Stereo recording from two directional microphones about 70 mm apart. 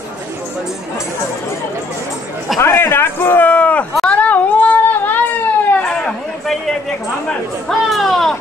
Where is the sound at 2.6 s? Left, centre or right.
Left.